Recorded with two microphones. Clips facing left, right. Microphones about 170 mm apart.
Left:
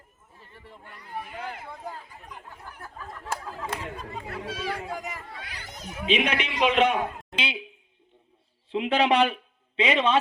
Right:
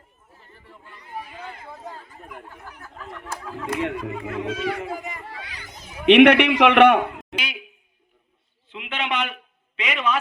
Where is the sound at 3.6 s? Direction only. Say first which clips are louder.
Right 8 dB; 75° right (ahead or behind).